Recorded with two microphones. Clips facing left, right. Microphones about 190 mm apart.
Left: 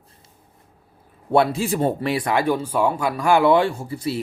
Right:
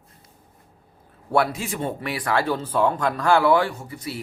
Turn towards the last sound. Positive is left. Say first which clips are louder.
# left 7 dB
turn(degrees=30)  # may be behind; listen again after turning